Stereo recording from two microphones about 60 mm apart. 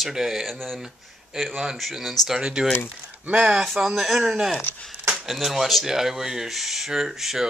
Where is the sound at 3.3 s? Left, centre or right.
Right.